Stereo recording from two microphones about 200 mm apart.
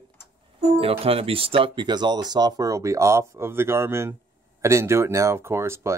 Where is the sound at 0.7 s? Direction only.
30° right (ahead or behind).